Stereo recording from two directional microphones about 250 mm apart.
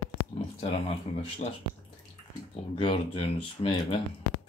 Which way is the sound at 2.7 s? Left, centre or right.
Left.